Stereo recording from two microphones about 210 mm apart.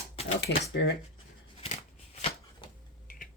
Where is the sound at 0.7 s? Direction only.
55° left (ahead or behind).